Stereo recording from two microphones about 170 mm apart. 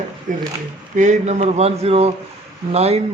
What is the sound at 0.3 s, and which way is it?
A man's voice, 50° right (ahead or behind).